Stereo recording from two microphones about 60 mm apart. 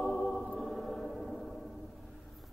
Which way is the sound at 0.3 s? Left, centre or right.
Centre.